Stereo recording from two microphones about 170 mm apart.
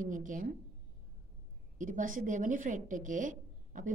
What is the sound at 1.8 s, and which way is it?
A woman's voice, 50° right (ahead or behind).